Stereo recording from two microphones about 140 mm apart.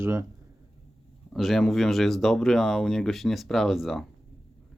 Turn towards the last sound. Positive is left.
turn(degrees=0)  # may be behind; listen again after turning